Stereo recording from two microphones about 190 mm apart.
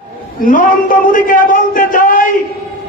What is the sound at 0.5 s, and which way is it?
A man's voice, 45° left (ahead or behind).